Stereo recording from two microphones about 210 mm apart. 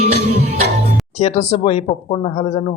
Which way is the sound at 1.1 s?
30° left (ahead or behind).